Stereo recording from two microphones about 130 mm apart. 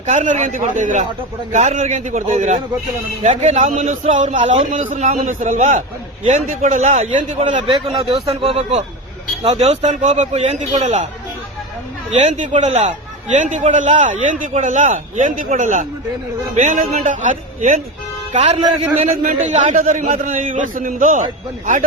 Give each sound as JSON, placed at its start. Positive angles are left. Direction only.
{"t": 0.0, "sound": "a man's voice", "side_deg": -65}
{"t": 1.5, "sound": "a man's voice", "side_deg": -65}
{"t": 7.4, "sound": "a man's voice", "side_deg": -40}
{"t": 12.1, "sound": "a man's voice", "side_deg": -65}
{"t": 13.3, "sound": "a man's voice", "side_deg": -75}
{"t": 16.6, "sound": "a man's voice", "side_deg": -65}
{"t": 18.3, "sound": "a man's voice", "side_deg": -60}
{"t": 19.1, "sound": "a man's voice", "side_deg": -75}